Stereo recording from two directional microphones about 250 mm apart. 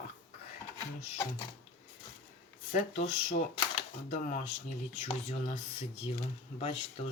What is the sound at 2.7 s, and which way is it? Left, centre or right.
Speech, left.